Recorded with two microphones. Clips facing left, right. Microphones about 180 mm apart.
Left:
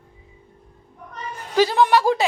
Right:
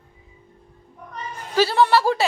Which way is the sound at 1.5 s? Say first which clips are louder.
Left 1 dB; 15° left (ahead or behind).